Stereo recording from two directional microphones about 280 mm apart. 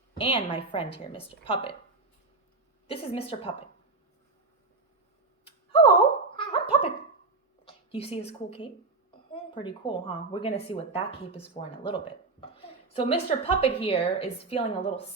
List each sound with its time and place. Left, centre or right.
0.2 s speech: centre
2.8 s speech: left
5.5 s a sound: centre
6.3 s gargling: centre
7.7 s a sound: centre
8.3 s speech: left